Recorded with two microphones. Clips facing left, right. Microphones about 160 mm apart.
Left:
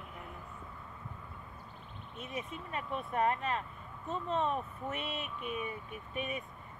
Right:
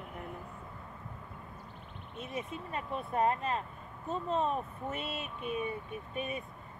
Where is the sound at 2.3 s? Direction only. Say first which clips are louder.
Right 2 dB; 35° right (ahead or behind).